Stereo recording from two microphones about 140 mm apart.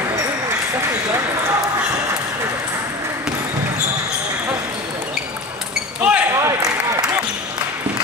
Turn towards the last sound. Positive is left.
turn(degrees=-20)  # may be behind; listen again after turning